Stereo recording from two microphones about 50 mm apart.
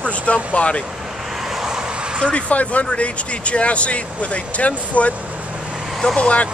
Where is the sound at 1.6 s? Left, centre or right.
Centre.